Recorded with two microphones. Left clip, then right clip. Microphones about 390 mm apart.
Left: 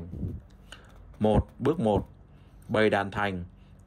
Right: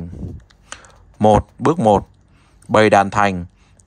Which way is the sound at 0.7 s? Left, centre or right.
Centre.